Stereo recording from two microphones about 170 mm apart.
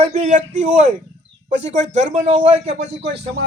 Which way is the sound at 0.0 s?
40° right (ahead or behind).